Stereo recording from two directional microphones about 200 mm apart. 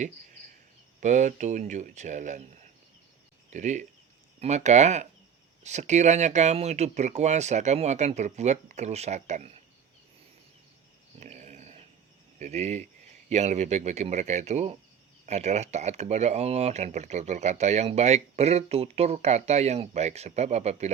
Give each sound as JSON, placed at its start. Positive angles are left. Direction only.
{"t": 1.0, "sound": "speech", "side_deg": -35}
{"t": 3.5, "sound": "speech", "side_deg": -35}
{"t": 11.2, "sound": "dog", "side_deg": -35}
{"t": 12.4, "sound": "speech", "side_deg": -35}